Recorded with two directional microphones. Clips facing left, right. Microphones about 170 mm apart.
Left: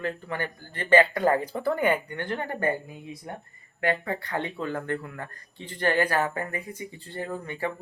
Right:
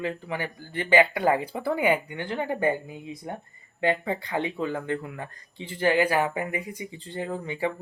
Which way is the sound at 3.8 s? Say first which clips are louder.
Right 2 dB; 15° right (ahead or behind).